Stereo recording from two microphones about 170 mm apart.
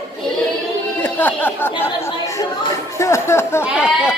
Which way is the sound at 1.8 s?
20° left (ahead or behind).